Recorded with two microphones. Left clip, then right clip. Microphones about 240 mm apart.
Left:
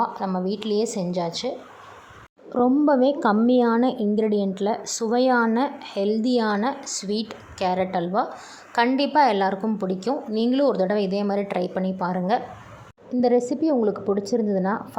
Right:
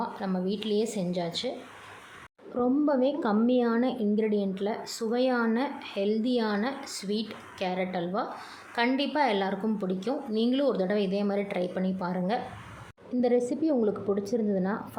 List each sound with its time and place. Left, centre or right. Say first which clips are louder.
0.0 s a woman's voice: left 7 dB; centre
2.6 s a woman's voice: left 7 dB; centre